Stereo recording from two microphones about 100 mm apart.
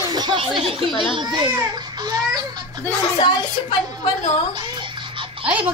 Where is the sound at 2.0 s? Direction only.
40° right (ahead or behind).